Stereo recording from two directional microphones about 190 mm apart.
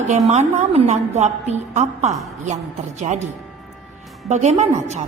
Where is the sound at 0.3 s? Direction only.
35° right (ahead or behind).